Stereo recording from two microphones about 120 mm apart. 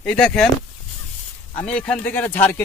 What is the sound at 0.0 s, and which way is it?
Speech, 5° left (ahead or behind).